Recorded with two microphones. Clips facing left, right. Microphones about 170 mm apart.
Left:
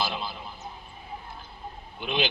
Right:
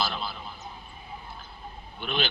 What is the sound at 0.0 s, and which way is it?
Vehicle, 15° left (ahead or behind).